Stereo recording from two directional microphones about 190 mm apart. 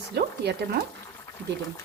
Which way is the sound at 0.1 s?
60° right (ahead or behind).